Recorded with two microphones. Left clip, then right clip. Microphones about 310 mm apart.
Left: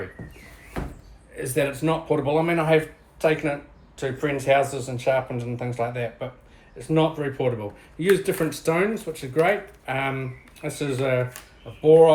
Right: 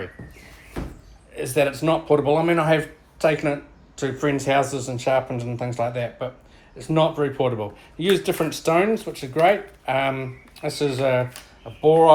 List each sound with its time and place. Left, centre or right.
1.5 s speech: right
8.0 s speech: centre
8.6 s speech: right